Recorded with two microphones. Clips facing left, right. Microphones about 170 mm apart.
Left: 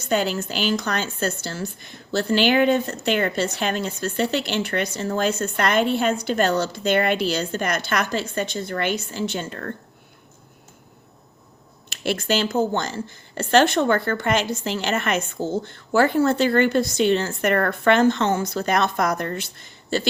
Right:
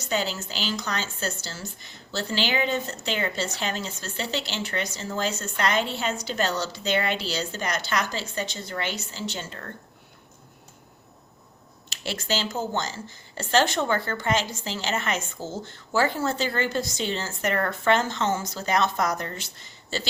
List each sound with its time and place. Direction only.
0.0 s speech: 55° left (ahead or behind)
11.9 s speech: 55° left (ahead or behind)